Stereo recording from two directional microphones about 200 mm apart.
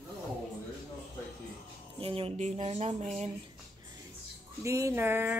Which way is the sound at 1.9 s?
30° right (ahead or behind).